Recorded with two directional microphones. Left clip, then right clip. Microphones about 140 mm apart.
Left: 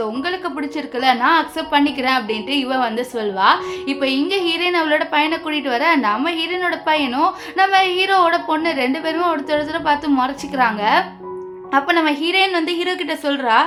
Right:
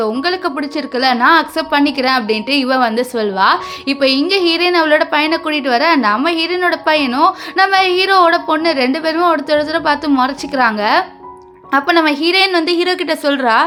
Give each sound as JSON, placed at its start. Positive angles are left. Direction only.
{"t": 0.0, "sound": "a woman's voice", "side_deg": -35}